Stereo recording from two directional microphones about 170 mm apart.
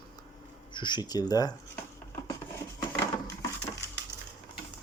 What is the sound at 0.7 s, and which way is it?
Speech, 25° left (ahead or behind).